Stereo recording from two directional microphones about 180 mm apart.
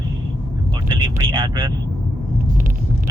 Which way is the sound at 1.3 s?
25° right (ahead or behind).